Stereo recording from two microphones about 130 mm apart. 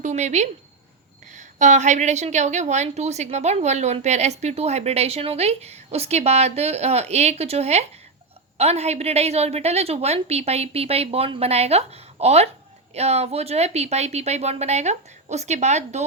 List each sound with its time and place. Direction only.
0.0 s a woman's voice: 60° right (ahead or behind)